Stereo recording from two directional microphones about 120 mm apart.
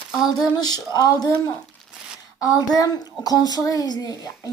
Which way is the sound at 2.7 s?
30° left (ahead or behind).